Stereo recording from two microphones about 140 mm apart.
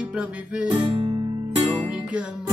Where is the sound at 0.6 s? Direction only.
40° right (ahead or behind).